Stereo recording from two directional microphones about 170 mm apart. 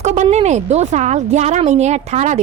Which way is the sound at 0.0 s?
40° right (ahead or behind).